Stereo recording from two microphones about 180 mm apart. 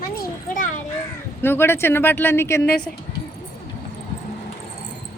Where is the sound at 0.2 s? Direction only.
45° left (ahead or behind).